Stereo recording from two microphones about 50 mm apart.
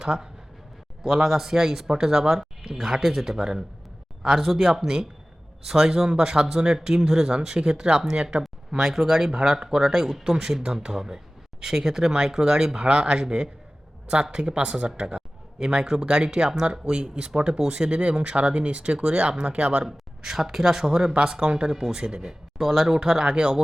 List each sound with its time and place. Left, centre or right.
0.0 s speech: centre
20.2 s speech: centre
23.0 s speech: centre